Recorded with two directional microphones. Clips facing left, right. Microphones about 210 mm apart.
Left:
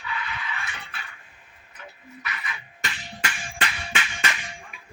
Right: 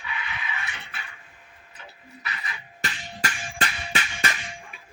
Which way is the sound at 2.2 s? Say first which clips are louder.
Left 1 dB; 35° right (ahead or behind).